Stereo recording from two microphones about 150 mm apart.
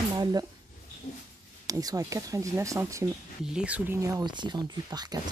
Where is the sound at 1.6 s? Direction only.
25° right (ahead or behind).